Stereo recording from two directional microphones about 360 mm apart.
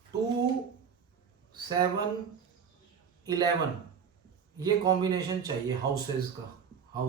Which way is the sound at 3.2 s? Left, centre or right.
Centre.